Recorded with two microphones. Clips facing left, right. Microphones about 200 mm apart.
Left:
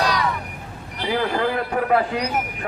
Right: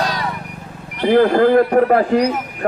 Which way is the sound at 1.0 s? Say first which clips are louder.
Right 10 dB; 50° right (ahead or behind).